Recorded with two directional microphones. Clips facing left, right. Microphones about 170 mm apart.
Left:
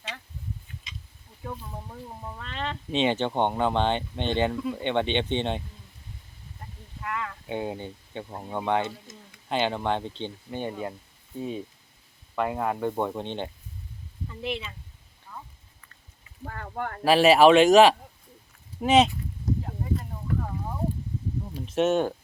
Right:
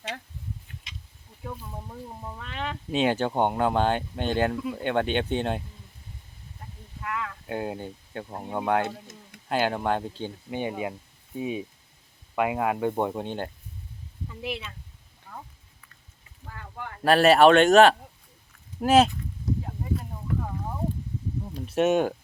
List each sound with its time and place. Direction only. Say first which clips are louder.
1.5 s speech: even; centre (ahead or behind)
7.0 s speech: even; centre (ahead or behind)
8.8 s tick-tock: right 2 dB; 65° right (ahead or behind)
9.5 s speech: right 1 dB; 5° right (ahead or behind)
15.3 s a sound: right 1 dB; 55° right (ahead or behind)
16.4 s a sound: left 6 dB; 50° left (ahead or behind)
17.0 s speech: even; centre (ahead or behind)
19.6 s a sound: left 1 dB; 5° right (ahead or behind)
21.8 s speech: right 1 dB; 10° right (ahead or behind)